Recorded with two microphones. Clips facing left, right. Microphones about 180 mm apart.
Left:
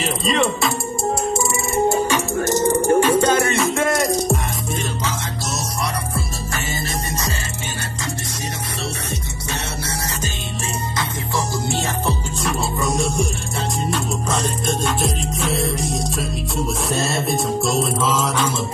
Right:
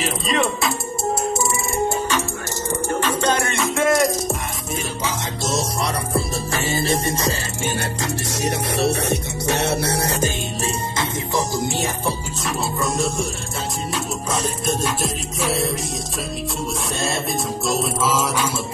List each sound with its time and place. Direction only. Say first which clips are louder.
0.0 s music: left 2 dB; centre (ahead or behind)
2.1 s music: left 6 dB; 15° left (ahead or behind); by 4.4 s centre (ahead or behind)
6.1 s music: right 4 dB; 30° right (ahead or behind)
8.7 s music: right 8 dB; 65° right (ahead or behind)
11.0 s music: right 1 dB; 15° right (ahead or behind)
12.8 s music: left 2 dB; centre (ahead or behind)